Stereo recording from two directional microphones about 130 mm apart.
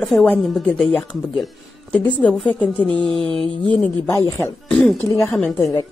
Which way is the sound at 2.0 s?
10° left (ahead or behind).